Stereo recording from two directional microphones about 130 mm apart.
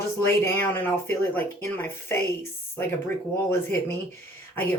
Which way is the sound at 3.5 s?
15° left (ahead or behind).